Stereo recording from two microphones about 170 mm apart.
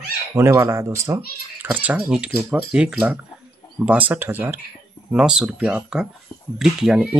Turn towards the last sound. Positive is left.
turn(degrees=-5)  # may be behind; listen again after turning